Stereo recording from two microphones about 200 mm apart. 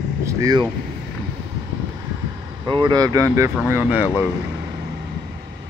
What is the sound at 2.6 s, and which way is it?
Speech, 25° right (ahead or behind).